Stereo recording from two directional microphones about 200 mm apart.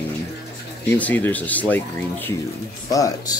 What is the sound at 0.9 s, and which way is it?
Speech, 10° left (ahead or behind).